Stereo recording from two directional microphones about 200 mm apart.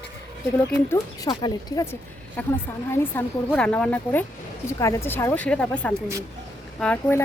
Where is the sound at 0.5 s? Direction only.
10° left (ahead or behind).